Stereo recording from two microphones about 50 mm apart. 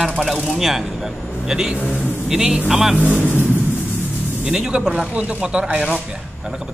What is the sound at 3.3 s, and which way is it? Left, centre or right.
Vehicle, left.